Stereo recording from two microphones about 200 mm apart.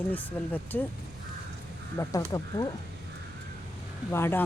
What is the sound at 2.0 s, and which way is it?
Speech, 15° left (ahead or behind).